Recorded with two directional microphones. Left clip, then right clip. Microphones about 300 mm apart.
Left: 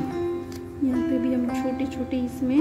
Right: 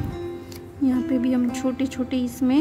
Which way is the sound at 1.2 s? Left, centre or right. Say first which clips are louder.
Right 2 dB; centre.